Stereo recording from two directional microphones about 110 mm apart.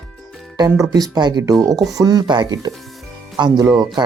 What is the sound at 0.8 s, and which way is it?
Speech, 30° right (ahead or behind).